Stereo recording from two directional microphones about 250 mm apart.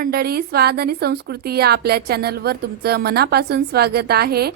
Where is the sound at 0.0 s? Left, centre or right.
Right.